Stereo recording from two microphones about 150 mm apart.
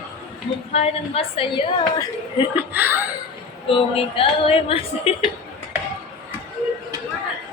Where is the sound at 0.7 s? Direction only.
40° left (ahead or behind).